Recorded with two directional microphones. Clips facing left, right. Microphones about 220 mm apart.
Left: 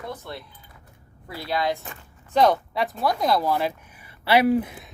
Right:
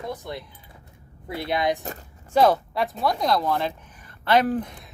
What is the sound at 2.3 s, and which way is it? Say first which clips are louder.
Speech: right 1 dB; 5° right (ahead or behind).